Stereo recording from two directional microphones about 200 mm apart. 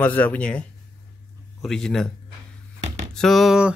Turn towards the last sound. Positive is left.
turn(degrees=-5)  # may be behind; listen again after turning